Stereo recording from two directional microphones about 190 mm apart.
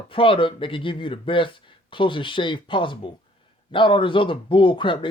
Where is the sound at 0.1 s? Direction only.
25° left (ahead or behind).